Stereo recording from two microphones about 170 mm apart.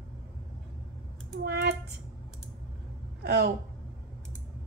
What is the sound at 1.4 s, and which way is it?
Speech, 70° right (ahead or behind).